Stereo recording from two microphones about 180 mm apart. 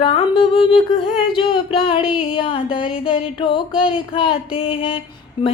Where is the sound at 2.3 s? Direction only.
30° left (ahead or behind).